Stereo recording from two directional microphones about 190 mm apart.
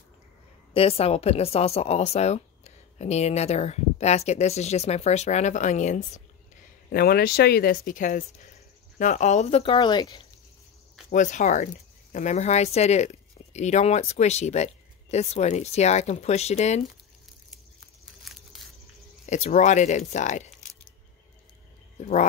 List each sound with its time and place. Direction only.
0.7 s speech: 30° left (ahead or behind)
6.9 s speech: 55° left (ahead or behind); by 10.2 s 25° left (ahead or behind)
11.1 s speech: 40° left (ahead or behind)
18.2 s a sound: centre (ahead or behind)
19.2 s speech: 40° left (ahead or behind)